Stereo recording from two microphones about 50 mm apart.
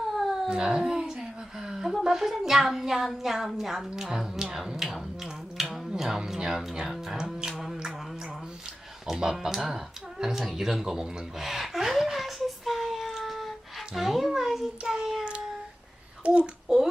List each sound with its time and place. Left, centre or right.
0.0 s cat: centre
0.4 s a sound: centre
2.0 s speech: centre
5.6 s music: centre
5.9 s speech: centre
9.0 s a sound: centre
16.2 s a child's voice: right
16.6 s a child's voice: centre